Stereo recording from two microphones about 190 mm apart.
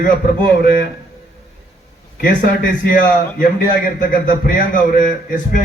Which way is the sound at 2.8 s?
45° left (ahead or behind).